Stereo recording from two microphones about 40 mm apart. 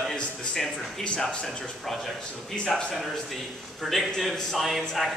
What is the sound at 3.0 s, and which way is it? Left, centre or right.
A man's voice, centre.